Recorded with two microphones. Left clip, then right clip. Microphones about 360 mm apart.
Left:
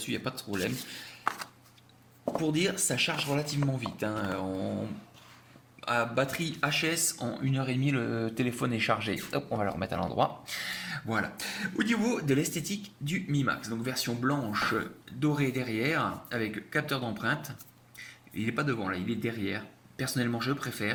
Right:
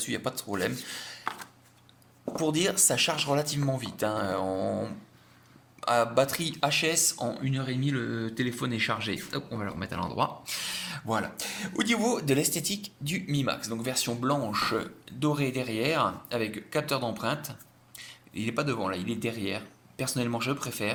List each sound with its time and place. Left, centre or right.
0.0 s speech: centre
2.4 s speech: centre
4.4 s a sound: right
5.8 s speech: centre